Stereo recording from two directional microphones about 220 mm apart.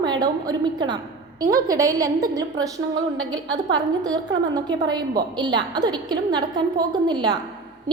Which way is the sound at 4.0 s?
15° right (ahead or behind).